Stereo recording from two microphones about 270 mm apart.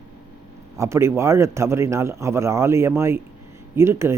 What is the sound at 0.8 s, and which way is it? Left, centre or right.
Speech, centre.